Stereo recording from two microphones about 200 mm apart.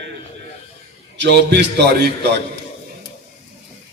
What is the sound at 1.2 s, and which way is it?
A man's voice, 60° right (ahead or behind).